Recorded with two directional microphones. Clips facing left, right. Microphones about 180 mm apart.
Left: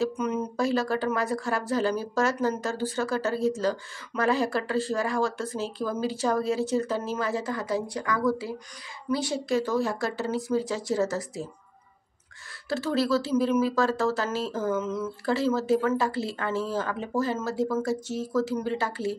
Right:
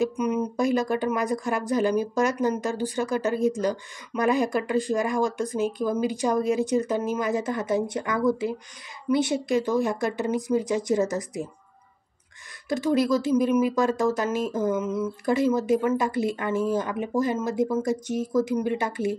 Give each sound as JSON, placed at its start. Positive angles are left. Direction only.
{"t": 0.0, "sound": "speech", "side_deg": -10}
{"t": 12.6, "sound": "speech", "side_deg": -15}